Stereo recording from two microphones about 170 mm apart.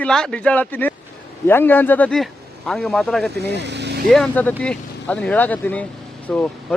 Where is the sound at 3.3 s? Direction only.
85° right.